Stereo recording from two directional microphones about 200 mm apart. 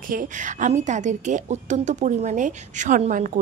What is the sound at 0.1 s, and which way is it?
A woman's voice, 40° right (ahead or behind).